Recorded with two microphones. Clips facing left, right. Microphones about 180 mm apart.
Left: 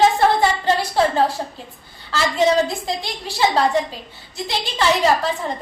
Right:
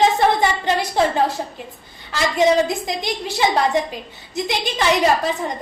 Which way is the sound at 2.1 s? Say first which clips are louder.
Right 1 dB; 20° right (ahead or behind).